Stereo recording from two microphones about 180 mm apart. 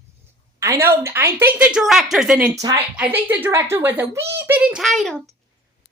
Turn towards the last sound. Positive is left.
turn(degrees=0)  # may be behind; listen again after turning